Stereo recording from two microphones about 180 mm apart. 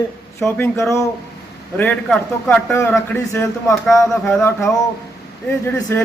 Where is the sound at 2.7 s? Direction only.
15° left (ahead or behind).